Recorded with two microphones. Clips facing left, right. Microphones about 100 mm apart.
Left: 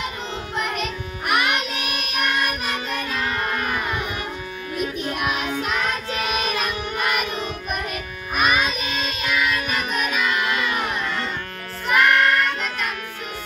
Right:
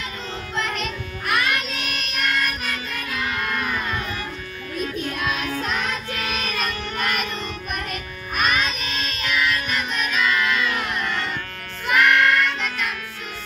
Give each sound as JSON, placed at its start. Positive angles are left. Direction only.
{"t": 0.6, "sound": "child singing", "side_deg": 15}
{"t": 3.2, "sound": "child singing", "side_deg": 35}
{"t": 3.5, "sound": "music", "side_deg": 15}
{"t": 4.7, "sound": "child singing", "side_deg": 20}
{"t": 6.1, "sound": "music", "side_deg": 20}
{"t": 12.1, "sound": "music", "side_deg": 40}